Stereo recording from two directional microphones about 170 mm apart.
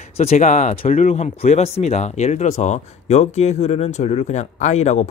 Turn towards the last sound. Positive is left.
turn(degrees=40)  # may be behind; listen again after turning